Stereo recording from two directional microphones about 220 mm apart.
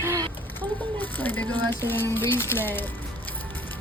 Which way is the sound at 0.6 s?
10° left (ahead or behind).